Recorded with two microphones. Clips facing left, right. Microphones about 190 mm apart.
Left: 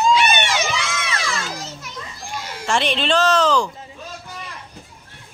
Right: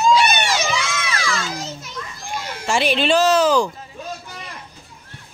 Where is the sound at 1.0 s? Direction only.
25° left (ahead or behind).